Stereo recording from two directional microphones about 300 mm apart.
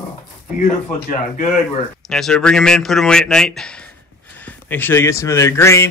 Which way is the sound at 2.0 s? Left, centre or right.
Centre.